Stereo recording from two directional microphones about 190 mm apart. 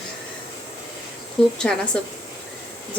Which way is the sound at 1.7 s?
5° left (ahead or behind).